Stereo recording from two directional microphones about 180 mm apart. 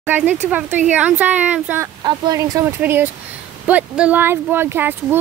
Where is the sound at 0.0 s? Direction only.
10° right (ahead or behind).